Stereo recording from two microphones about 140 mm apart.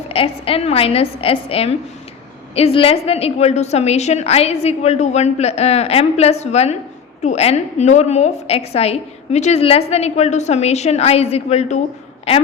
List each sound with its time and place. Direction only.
0.1 s a woman's voice: 40° left (ahead or behind)